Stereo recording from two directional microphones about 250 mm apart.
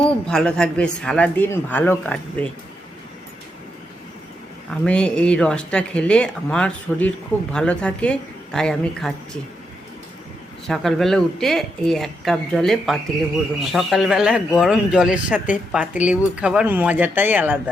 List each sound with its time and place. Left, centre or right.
0.3 s a man's voice: centre
4.7 s a man's voice: centre
10.7 s a man's voice: centre